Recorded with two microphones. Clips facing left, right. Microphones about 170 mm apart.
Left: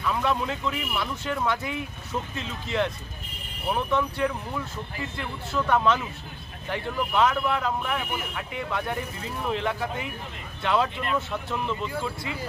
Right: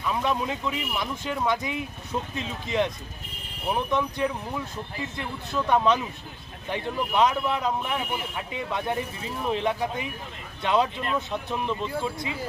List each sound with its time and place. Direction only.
0.0 s speech: 15° right (ahead or behind)